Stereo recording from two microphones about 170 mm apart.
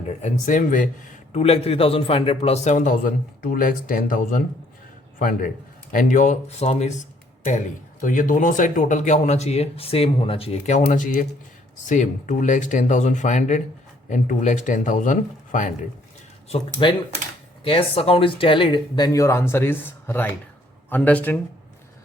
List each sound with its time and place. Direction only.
0.0 s a man's voice: 45° left (ahead or behind)
5.9 s a man's voice: 50° left (ahead or behind)
8.0 s a man's voice: 50° left (ahead or behind)
16.8 s speech: 30° left (ahead or behind); by 21.3 s 10° left (ahead or behind)